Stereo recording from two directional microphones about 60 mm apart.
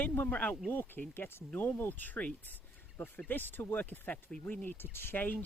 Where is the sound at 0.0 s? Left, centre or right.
Left.